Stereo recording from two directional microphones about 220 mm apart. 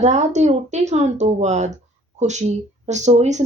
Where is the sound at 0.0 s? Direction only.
30° right (ahead or behind).